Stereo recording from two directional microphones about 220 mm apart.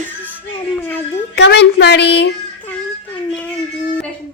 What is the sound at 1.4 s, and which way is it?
Speech, 50° left (ahead or behind).